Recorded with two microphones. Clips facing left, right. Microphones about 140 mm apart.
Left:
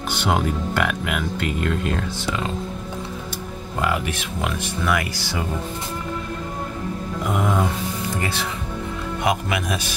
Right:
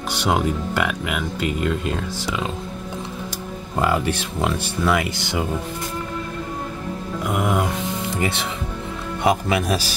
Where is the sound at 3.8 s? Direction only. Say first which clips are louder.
Right 3 dB; 30° right (ahead or behind).